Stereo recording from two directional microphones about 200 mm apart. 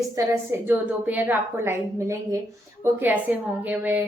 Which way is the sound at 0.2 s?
15° right (ahead or behind).